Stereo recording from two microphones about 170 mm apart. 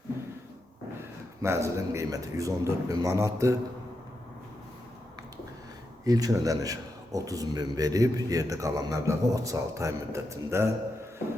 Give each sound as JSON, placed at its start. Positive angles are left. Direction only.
{"t": 1.4, "sound": "a man's voice", "side_deg": -15}
{"t": 6.1, "sound": "a man's voice", "side_deg": -20}